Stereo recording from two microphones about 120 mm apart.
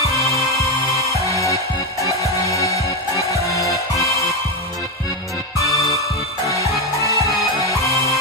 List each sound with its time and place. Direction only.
0.0 s music: 25° right (ahead or behind)
1.2 s music: 25° left (ahead or behind)
7.0 s music: 25° right (ahead or behind)
7.7 s music: 25° left (ahead or behind)